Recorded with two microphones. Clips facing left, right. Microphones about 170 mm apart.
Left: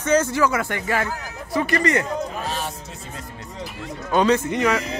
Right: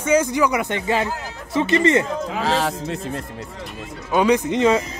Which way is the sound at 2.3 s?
90° right.